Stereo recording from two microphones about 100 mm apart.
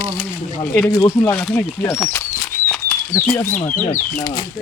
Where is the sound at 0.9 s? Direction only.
35° left (ahead or behind).